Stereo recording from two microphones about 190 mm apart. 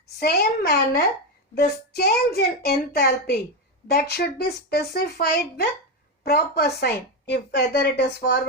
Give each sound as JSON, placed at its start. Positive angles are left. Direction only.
{"t": 0.2, "sound": "a woman's voice", "side_deg": 55}